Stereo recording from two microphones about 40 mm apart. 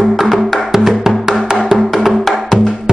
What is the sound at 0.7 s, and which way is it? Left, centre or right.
Music, centre.